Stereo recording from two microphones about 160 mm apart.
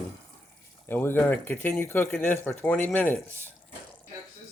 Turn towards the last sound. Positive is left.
turn(degrees=10)  # may be behind; listen again after turning